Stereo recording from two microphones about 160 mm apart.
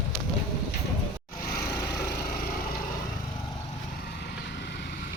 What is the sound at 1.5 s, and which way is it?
Vehicle, 70° left (ahead or behind).